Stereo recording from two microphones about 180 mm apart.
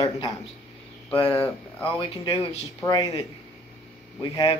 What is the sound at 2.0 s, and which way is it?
Speech, 25° left (ahead or behind).